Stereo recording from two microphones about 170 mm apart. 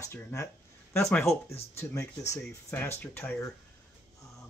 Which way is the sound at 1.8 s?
20° left (ahead or behind).